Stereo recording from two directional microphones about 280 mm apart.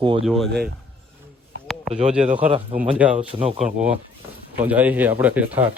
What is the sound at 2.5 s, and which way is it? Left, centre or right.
Speech, centre.